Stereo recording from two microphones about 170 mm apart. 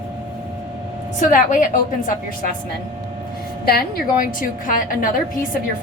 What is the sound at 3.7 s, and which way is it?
A woman's voice, 60° left (ahead or behind).